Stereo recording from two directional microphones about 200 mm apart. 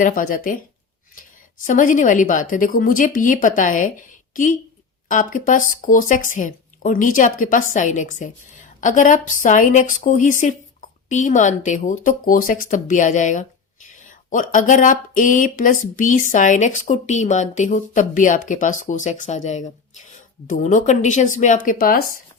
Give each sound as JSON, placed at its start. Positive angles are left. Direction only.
{"t": 0.0, "sound": "speech", "side_deg": 45}
{"t": 1.6, "sound": "speech", "side_deg": 40}
{"t": 5.0, "sound": "speech", "side_deg": 40}